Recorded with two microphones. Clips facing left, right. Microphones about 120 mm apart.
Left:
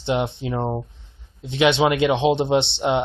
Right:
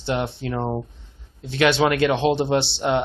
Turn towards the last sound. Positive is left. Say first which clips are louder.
# left 1 dB
turn(degrees=20)  # may be behind; listen again after turning